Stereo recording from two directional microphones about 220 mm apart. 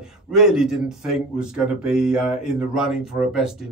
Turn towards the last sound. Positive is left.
turn(degrees=0)  # may be behind; listen again after turning